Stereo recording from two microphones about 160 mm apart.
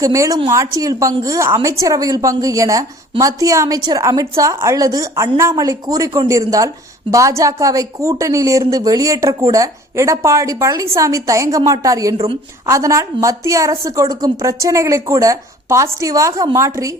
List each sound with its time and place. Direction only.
0.0 s a woman's voice: 20° right (ahead or behind)
12.1 s a woman's voice: 40° right (ahead or behind)
12.6 s a woman's voice: 20° right (ahead or behind)